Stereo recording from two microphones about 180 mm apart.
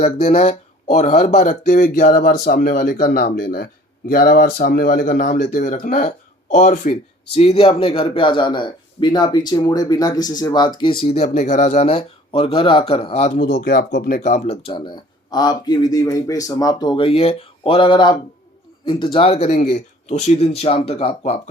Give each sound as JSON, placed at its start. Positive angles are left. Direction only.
{"t": 0.0, "sound": "speech", "side_deg": 35}
{"t": 11.0, "sound": "speech", "side_deg": 35}
{"t": 13.4, "sound": "speech", "side_deg": 60}
{"t": 14.7, "sound": "speech", "side_deg": 25}